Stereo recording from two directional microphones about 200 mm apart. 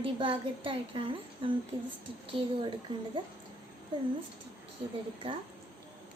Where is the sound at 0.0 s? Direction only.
25° right (ahead or behind).